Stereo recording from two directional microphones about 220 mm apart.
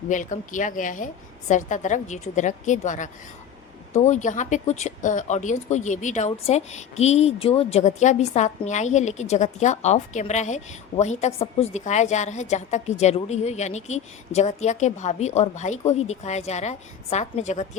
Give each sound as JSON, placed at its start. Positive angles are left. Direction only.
{"t": 0.1, "sound": "speech", "side_deg": 35}